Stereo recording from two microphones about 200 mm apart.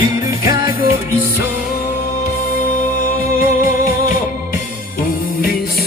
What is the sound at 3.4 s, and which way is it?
Music, 45° left (ahead or behind).